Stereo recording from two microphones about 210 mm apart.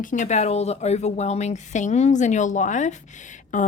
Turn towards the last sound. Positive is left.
turn(degrees=35)  # may be behind; listen again after turning